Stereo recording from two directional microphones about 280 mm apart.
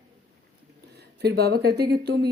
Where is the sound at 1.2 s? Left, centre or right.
Right.